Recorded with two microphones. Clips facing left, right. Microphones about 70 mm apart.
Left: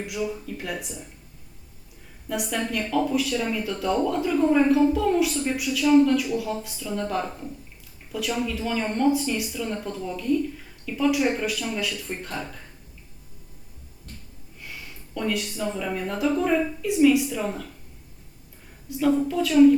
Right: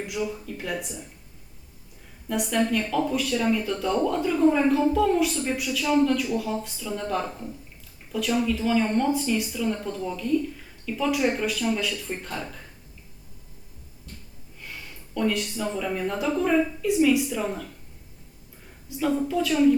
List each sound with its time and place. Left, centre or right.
0.0 s speech: centre
2.3 s speech: centre
14.6 s speech: centre
18.9 s speech: centre